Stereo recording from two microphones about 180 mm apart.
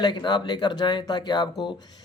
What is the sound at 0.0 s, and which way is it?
Speech, 25° left (ahead or behind).